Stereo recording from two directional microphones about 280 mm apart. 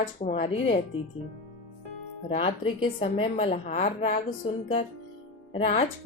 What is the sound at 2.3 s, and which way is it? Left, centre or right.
A woman's voice, centre.